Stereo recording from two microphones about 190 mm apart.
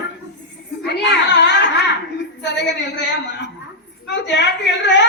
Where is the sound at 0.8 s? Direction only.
60° left (ahead or behind).